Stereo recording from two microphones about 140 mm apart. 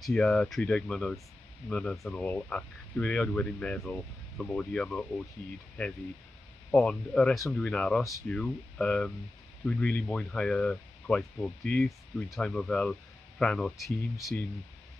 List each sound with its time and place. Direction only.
0.0 s speech: 5° left (ahead or behind)
14.1 s speech: 20° left (ahead or behind)